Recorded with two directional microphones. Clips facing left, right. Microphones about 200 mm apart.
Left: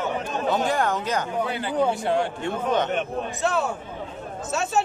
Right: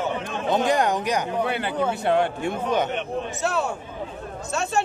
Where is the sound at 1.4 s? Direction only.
65° right (ahead or behind).